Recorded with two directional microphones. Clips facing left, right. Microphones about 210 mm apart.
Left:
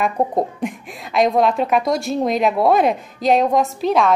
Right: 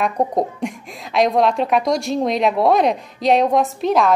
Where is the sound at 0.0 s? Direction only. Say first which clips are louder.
Even; 5° left (ahead or behind).